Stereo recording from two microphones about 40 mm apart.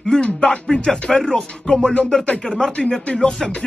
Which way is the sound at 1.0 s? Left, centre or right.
Centre.